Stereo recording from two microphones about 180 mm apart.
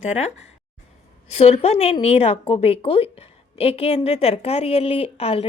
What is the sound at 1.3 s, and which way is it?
A woman's voice, 35° left (ahead or behind).